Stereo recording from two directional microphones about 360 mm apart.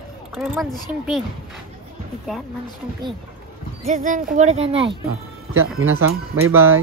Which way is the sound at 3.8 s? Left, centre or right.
Right.